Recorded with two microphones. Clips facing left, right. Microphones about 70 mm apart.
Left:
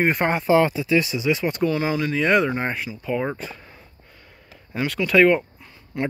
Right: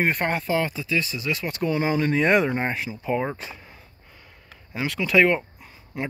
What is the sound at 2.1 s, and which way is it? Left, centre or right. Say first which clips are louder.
Speech: left 2 dB; centre.